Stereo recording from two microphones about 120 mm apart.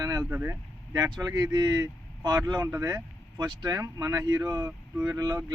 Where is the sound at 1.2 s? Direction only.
30° right (ahead or behind).